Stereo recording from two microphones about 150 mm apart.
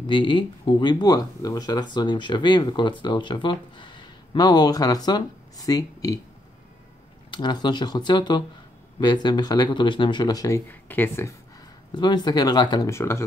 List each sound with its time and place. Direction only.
0.0 s speech: 30° left (ahead or behind)
7.2 s speech: 30° left (ahead or behind)
10.7 s speech: 15° left (ahead or behind)
11.9 s speech: 30° left (ahead or behind)